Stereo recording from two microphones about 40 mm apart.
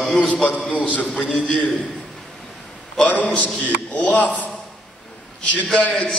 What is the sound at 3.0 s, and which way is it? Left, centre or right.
A man's voice, left.